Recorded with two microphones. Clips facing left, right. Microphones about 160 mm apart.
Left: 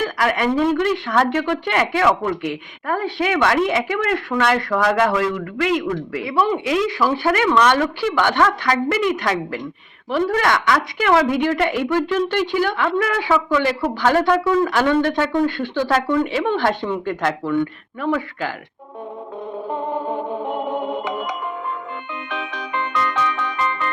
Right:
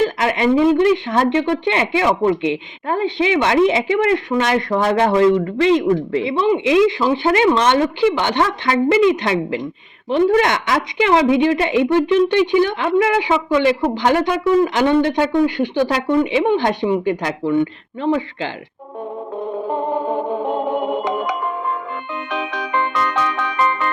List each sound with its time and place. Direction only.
0.0 s a woman's voice: 25° right (ahead or behind)
22.3 s music: 90° right
23.0 s music: 75° right (ahead or behind)